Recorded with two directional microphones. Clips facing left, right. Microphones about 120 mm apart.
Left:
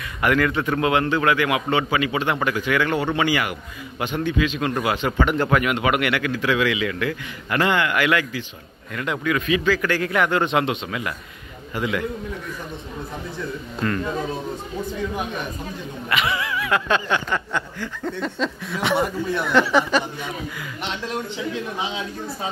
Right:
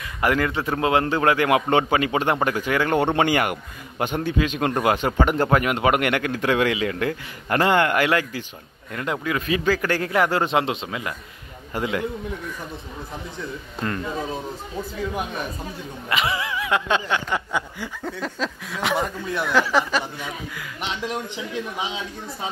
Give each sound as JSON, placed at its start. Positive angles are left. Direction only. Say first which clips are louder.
{"t": 0.2, "sound": "a man's voice", "louder": "left 2 dB", "side_deg": -30}
{"t": 3.0, "sound": "a man's voice", "louder": "right 2 dB", "side_deg": -50}
{"t": 16.1, "sound": "a sound", "louder": "left 1 dB", "side_deg": -30}